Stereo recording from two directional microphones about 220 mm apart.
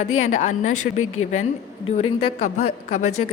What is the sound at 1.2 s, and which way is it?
Speech, 70° left (ahead or behind).